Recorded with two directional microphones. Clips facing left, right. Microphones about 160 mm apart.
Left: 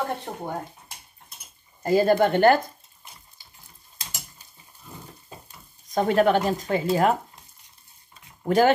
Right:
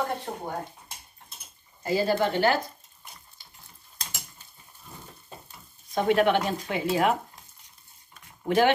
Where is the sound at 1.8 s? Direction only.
50° left (ahead or behind).